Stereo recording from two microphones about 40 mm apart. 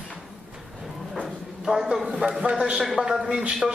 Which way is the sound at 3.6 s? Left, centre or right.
Centre.